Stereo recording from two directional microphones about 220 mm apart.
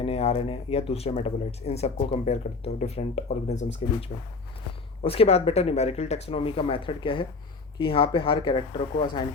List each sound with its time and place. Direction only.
0.0 s speech: 30° left (ahead or behind)
5.0 s speech: 25° left (ahead or behind)